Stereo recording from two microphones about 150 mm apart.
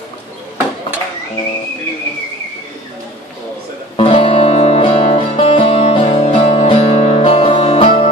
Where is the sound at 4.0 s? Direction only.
40° left (ahead or behind).